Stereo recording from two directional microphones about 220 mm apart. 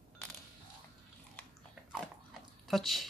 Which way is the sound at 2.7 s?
Centre (ahead or behind).